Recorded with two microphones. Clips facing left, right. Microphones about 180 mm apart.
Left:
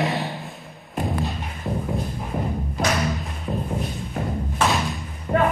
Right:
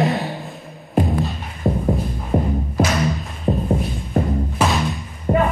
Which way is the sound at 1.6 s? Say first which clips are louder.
Right 7 dB; 50° right (ahead or behind).